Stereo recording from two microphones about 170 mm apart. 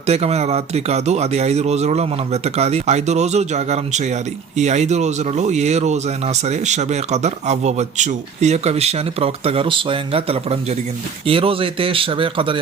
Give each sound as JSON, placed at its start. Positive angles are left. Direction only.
{"t": 0.0, "sound": "speech", "side_deg": -40}